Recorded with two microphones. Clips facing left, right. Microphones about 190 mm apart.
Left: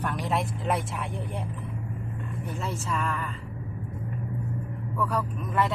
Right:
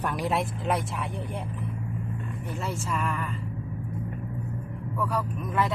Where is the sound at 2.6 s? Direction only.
5° right (ahead or behind).